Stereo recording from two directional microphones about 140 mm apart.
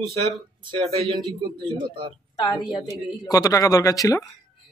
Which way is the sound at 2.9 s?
25° left (ahead or behind).